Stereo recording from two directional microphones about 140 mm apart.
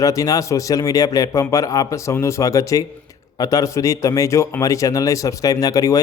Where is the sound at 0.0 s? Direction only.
25° left (ahead or behind).